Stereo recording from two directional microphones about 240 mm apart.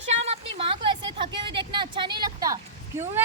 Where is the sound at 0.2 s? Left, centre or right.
Right.